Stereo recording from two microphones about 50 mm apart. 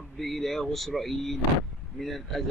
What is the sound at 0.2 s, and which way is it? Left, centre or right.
A man's voice, centre.